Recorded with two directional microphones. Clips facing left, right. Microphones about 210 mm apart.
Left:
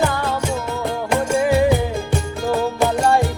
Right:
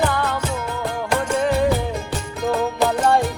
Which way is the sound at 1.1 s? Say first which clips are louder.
Left 3 dB; 10° left (ahead or behind).